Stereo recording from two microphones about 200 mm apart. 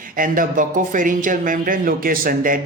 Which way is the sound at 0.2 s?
40° right (ahead or behind).